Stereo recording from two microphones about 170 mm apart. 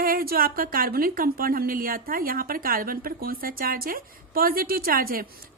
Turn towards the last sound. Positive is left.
turn(degrees=-60)  # may be behind; listen again after turning